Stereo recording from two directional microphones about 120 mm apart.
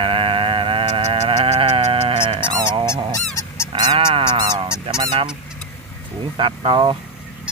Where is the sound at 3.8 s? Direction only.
40° right (ahead or behind).